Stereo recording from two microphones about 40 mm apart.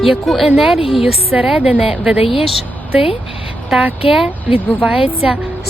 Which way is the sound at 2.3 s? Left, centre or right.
Centre.